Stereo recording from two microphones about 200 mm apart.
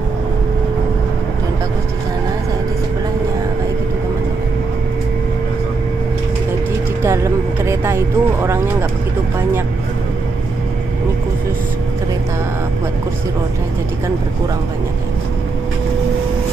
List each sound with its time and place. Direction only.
7.0 s speech: 15° right (ahead or behind)